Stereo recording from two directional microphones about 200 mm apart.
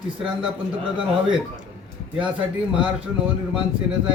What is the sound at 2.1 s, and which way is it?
Speech, 5° right (ahead or behind).